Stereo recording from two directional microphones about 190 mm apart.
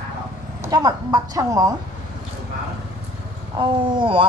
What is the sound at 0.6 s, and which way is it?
Speech, 20° right (ahead or behind).